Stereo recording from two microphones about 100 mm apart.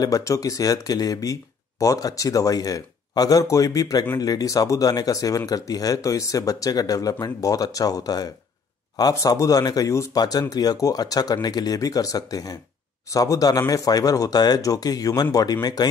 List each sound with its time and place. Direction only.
0.0 s speech: 35° left (ahead or behind)